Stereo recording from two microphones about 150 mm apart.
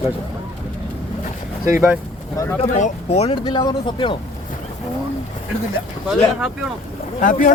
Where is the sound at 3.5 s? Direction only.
30° left (ahead or behind).